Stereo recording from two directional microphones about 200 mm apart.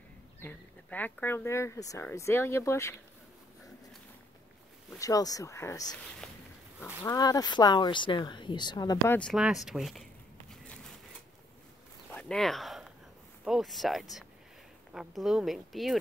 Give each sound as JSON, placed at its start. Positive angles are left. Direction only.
{"t": 0.4, "sound": "speech", "side_deg": 10}
{"t": 4.9, "sound": "speech", "side_deg": 15}
{"t": 6.0, "sound": "speech", "side_deg": 0}
{"t": 7.0, "sound": "speech", "side_deg": 20}
{"t": 9.3, "sound": "speech", "side_deg": 0}
{"t": 10.5, "sound": "a sound", "side_deg": 0}
{"t": 12.1, "sound": "a sound", "side_deg": 5}
{"t": 13.4, "sound": "speech", "side_deg": 0}